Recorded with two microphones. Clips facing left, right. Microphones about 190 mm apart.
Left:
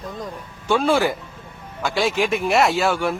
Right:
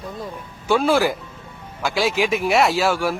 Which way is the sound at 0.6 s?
5° right (ahead or behind).